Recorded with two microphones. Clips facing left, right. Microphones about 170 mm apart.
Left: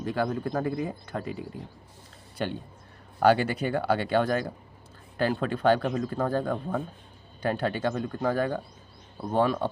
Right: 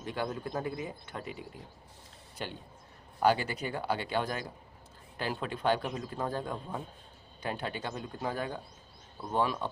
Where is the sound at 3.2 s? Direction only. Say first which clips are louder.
Left 6 dB; 65° left (ahead or behind).